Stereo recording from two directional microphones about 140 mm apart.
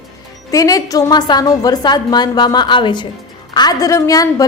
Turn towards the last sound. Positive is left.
turn(degrees=25)  # may be behind; listen again after turning